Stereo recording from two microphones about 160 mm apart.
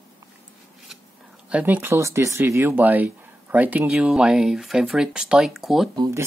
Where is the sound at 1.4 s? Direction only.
10° right (ahead or behind).